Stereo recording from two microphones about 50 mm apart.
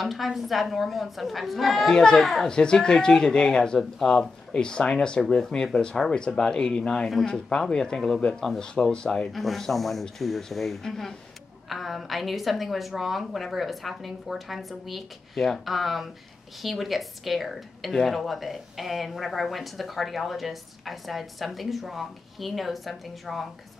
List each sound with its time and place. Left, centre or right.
0.0 s speech: centre
2.5 s speech: centre
9.3 s speech: centre